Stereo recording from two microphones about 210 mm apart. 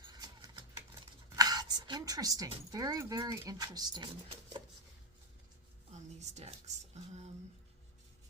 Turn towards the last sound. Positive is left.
turn(degrees=-30)  # may be behind; listen again after turning